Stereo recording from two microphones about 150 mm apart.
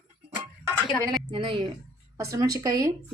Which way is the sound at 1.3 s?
35° right (ahead or behind).